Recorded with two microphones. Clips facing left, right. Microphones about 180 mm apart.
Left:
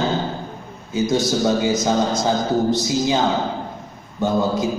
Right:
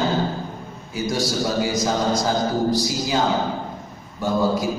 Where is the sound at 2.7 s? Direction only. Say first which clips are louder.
Left 3 dB; 20° left (ahead or behind).